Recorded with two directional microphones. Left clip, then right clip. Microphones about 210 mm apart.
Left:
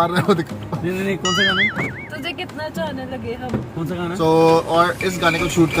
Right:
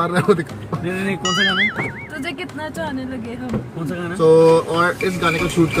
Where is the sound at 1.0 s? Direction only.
Centre (ahead or behind).